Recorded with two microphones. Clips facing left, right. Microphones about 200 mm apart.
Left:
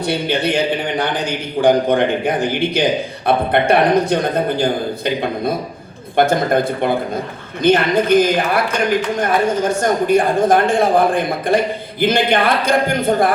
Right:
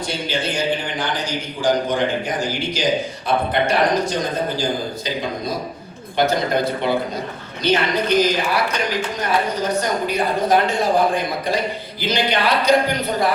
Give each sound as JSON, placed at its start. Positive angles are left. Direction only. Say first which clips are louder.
{"t": 0.0, "sound": "a man's voice", "louder": "left 6 dB", "side_deg": 60}